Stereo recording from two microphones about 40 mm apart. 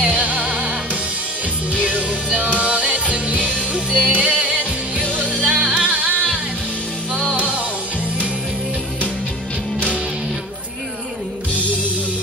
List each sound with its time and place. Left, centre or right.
0.2 s music: right
1.7 s music: right
3.3 s music: centre
5.1 s music: right
5.5 s music: centre
5.9 s music: right
7.3 s music: right